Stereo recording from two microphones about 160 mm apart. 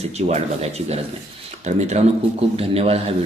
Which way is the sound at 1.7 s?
45° right (ahead or behind).